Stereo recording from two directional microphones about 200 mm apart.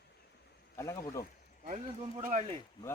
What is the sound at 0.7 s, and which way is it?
Speech, 15° left (ahead or behind).